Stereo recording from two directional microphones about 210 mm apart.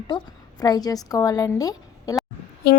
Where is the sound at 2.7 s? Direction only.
50° left (ahead or behind).